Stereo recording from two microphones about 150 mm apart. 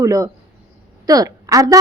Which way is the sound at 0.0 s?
20° right (ahead or behind).